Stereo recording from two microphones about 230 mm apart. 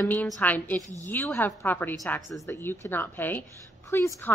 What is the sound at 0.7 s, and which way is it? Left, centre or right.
Speech, centre.